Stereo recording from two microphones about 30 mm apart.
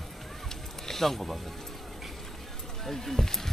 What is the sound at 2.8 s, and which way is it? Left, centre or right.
Speech, centre.